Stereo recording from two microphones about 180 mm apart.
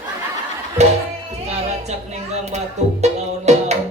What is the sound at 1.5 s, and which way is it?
Speech, 35° right (ahead or behind).